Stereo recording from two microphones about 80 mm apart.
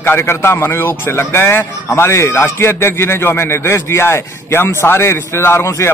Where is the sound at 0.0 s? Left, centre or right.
Left.